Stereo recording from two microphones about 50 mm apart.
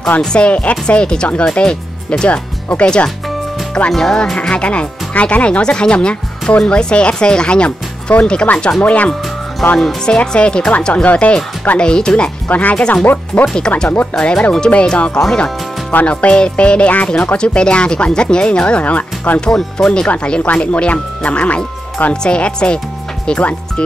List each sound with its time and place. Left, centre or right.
0.2 s speech: centre
3.9 s speech: centre
4.4 s speech: left
12.4 s speech: left
15.1 s speech: centre
15.9 s speech: left
19.4 s speech: centre
20.1 s speech: left